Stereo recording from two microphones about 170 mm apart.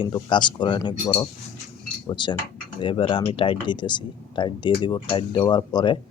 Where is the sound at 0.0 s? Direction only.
30° left (ahead or behind).